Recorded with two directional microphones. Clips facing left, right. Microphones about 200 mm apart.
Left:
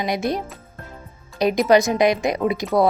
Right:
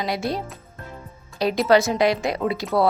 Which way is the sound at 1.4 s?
15° left (ahead or behind).